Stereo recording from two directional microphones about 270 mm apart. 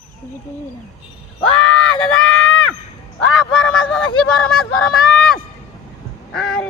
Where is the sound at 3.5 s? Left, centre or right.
Centre.